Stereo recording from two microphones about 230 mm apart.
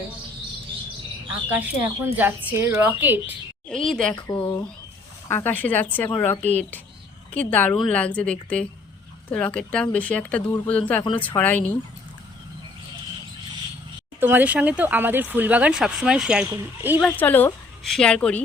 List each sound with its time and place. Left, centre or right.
1.5 s speech: centre
3.7 s speech: centre
4.1 s speech: centre
5.3 s speech: centre
14.2 s speech: centre
17.0 s speech: centre